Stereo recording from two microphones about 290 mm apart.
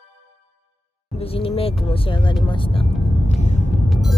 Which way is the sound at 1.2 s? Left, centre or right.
Centre.